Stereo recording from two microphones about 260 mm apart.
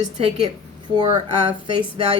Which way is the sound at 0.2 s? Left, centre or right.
Right.